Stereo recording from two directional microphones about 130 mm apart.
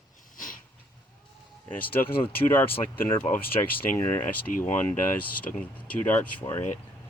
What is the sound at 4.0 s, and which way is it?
Speech, 20° left (ahead or behind).